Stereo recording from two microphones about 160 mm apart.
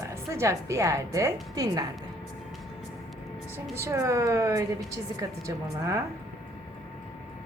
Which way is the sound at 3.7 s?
20° right (ahead or behind).